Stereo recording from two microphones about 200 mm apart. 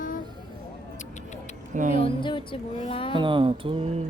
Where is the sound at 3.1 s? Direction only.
25° right (ahead or behind).